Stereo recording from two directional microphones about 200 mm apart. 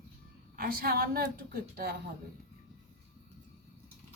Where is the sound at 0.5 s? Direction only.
45° right (ahead or behind).